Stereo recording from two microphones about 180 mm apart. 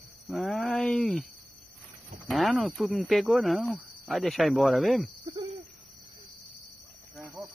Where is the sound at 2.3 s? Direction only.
Centre (ahead or behind).